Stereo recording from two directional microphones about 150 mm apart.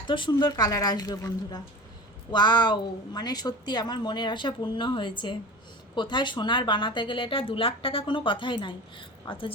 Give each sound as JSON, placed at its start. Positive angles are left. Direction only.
{"t": 0.1, "sound": "a woman's voice", "side_deg": 30}